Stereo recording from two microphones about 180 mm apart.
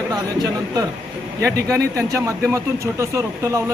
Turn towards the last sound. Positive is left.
turn(degrees=-15)  # may be behind; listen again after turning